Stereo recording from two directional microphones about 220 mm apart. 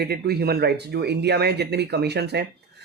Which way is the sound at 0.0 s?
45° right (ahead or behind).